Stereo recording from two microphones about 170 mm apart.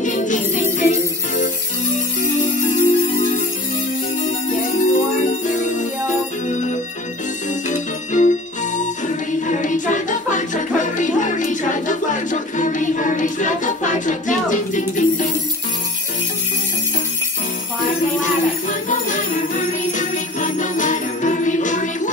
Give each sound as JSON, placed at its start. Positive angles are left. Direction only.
{"t": 0.0, "sound": "music", "side_deg": 50}
{"t": 0.7, "sound": "jingle bell", "side_deg": 45}
{"t": 2.6, "sound": "music", "side_deg": 50}
{"t": 4.7, "sound": "music", "side_deg": 45}
{"t": 18.2, "sound": "jingle bell", "side_deg": 50}